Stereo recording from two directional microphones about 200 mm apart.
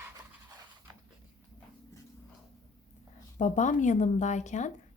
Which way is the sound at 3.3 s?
40° left (ahead or behind).